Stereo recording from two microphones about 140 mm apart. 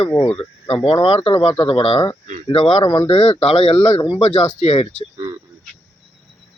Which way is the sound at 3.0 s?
50° left (ahead or behind).